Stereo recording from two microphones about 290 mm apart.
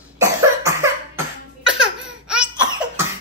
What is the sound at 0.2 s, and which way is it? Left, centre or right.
Cough, centre.